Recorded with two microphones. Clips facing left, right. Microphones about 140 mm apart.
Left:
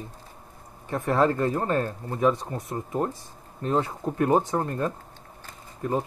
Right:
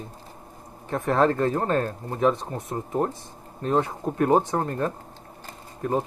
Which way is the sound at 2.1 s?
25° right (ahead or behind).